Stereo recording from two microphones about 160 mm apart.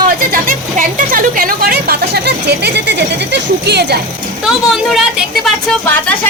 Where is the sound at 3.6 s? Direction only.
90° right.